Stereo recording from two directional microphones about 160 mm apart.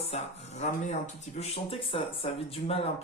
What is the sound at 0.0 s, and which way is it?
Speech, 45° left (ahead or behind).